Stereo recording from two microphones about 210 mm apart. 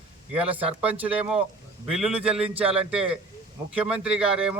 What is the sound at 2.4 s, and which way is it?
Speech, 25° right (ahead or behind).